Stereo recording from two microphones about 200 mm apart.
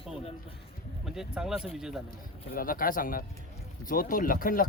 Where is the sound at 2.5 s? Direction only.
45° left (ahead or behind).